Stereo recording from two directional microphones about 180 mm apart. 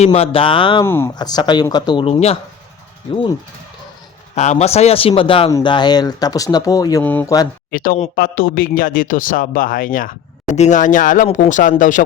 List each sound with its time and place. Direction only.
0.0 s speech: 35° left (ahead or behind)
0.9 s speech: 15° left (ahead or behind); by 2.4 s 35° left (ahead or behind)
4.4 s speech: 40° left (ahead or behind); by 7.0 s 20° left (ahead or behind)
7.0 s speech: 10° left (ahead or behind)
7.7 s speech: 55° left (ahead or behind)